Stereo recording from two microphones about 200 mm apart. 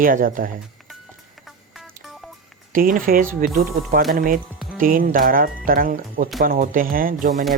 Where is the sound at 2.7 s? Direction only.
45° right (ahead or behind).